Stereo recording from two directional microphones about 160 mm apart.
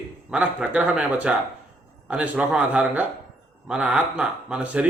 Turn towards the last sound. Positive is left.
turn(degrees=-10)  # may be behind; listen again after turning